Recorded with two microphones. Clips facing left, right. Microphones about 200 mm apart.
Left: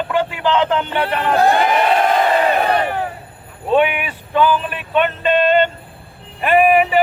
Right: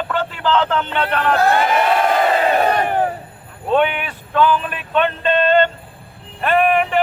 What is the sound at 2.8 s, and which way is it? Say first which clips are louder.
Crowd: right 3 dB; 50° right (ahead or behind).